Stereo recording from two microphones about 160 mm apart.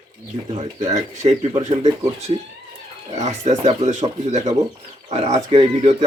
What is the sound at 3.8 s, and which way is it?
Speech, 45° right (ahead or behind).